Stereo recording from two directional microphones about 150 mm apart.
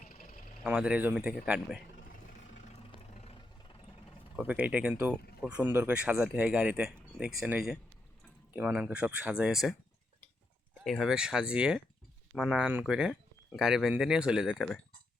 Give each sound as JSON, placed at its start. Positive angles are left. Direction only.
{"t": 0.0, "sound": "vehicle", "side_deg": 70}
{"t": 0.6, "sound": "speech", "side_deg": -5}
{"t": 2.9, "sound": "roar", "side_deg": 45}
{"t": 4.4, "sound": "speech", "side_deg": -10}
{"t": 10.8, "sound": "speech", "side_deg": 0}